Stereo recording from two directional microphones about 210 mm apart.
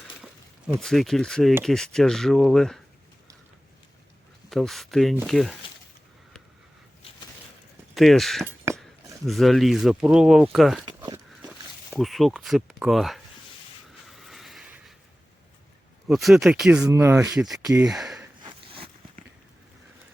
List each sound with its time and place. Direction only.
0.8 s speech: centre (ahead or behind)
4.4 s speech: centre (ahead or behind)
7.9 s speech: centre (ahead or behind)
11.9 s speech: centre (ahead or behind)
14.1 s a sound: centre (ahead or behind)
16.0 s speech: centre (ahead or behind); by 17.8 s 15° right (ahead or behind)
17.8 s speech: centre (ahead or behind)
18.4 s a sound: 25° right (ahead or behind)